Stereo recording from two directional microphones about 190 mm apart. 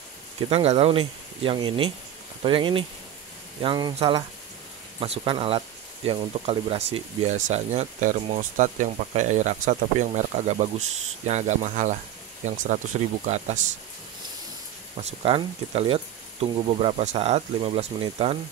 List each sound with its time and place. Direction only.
0.5 s speech: 30° right (ahead or behind)
15.0 s speech: 35° right (ahead or behind)